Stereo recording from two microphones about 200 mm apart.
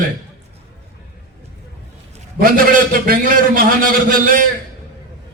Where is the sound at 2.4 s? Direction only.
45° right (ahead or behind).